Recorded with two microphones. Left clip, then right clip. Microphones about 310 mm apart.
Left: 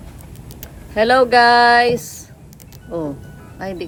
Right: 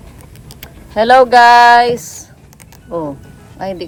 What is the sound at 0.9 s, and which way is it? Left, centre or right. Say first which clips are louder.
Speech: right 5 dB; centre.